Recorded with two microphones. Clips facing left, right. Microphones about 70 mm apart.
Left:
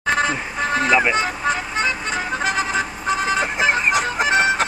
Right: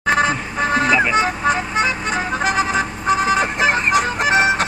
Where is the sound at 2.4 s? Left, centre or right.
Centre.